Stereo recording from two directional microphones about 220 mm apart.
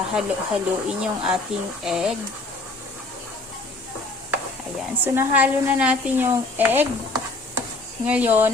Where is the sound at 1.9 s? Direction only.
Centre (ahead or behind).